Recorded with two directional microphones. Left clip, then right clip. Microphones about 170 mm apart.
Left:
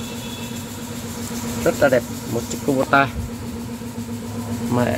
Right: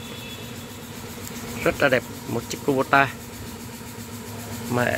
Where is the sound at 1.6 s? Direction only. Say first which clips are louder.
Left 4 dB; 25° right (ahead or behind).